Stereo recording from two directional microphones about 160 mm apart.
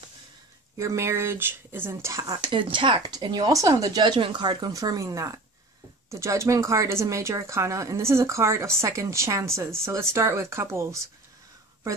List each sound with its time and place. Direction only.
0.7 s speech: 15° right (ahead or behind)